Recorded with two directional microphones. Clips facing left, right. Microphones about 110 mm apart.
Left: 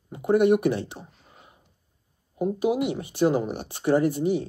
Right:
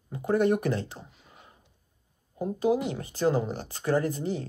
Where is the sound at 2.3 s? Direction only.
15° left (ahead or behind).